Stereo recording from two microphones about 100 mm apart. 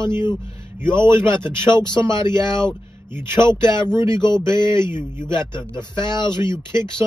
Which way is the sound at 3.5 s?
50° left (ahead or behind).